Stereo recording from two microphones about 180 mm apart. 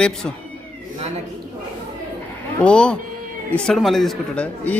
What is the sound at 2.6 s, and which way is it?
Speech, 5° left (ahead or behind).